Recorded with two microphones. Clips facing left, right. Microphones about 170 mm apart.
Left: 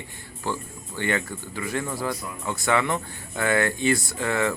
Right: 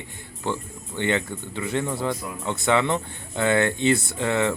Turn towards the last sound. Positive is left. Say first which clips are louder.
# right 2 dB
turn(degrees=-20)  # may be behind; listen again after turning